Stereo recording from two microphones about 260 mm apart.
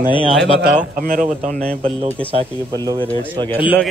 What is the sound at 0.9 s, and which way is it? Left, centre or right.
Speech, right.